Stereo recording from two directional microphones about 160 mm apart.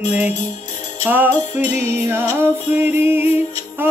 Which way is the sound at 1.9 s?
15° right (ahead or behind).